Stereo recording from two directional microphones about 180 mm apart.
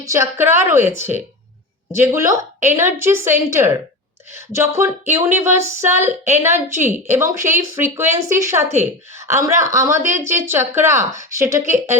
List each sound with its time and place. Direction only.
0.0 s speech: 15° right (ahead or behind)